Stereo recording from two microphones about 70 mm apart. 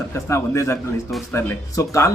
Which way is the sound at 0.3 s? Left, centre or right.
Left.